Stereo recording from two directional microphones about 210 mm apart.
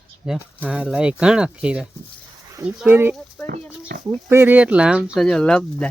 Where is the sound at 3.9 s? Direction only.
50° right (ahead or behind).